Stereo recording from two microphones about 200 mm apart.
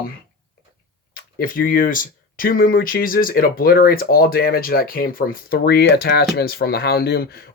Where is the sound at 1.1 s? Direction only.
45° left (ahead or behind).